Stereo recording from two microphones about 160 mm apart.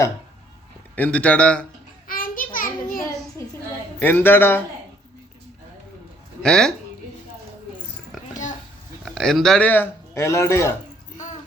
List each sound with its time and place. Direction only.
0.9 s a man's voice: 10° left (ahead or behind)
2.0 s a sound: 60° left (ahead or behind)
4.0 s a man's voice: 15° left (ahead or behind)
6.4 s speech: 5° left (ahead or behind)
8.3 s a sound: 50° left (ahead or behind)
9.0 s a man's voice: 5° left (ahead or behind)